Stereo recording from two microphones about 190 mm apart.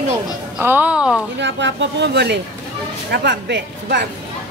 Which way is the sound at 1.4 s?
70° right (ahead or behind).